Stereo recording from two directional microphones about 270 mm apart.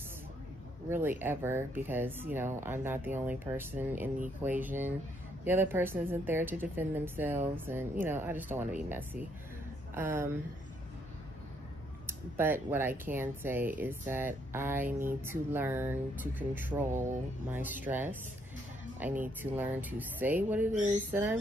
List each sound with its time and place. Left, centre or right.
0.8 s speech: centre
12.1 s speech: centre
20.7 s a woman's voice: right
21.1 s speech: centre